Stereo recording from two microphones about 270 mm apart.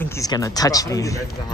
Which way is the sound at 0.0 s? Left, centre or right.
Centre.